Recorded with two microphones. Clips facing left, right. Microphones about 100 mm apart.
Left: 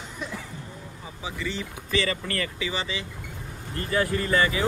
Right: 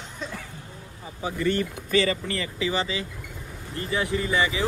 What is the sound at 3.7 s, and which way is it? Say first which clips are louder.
Speech: left 1 dB; 20° right (ahead or behind).